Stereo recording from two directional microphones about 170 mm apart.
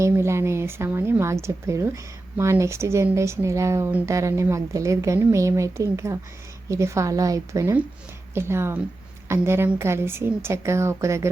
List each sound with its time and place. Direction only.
0.0 s speech: 15° right (ahead or behind)